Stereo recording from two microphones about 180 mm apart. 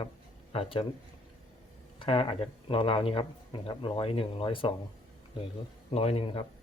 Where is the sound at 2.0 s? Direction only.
30° left (ahead or behind).